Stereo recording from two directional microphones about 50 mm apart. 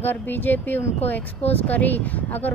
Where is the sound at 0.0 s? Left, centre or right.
Left.